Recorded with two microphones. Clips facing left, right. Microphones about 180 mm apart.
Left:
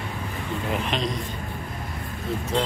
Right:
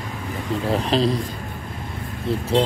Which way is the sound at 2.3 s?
30° right (ahead or behind).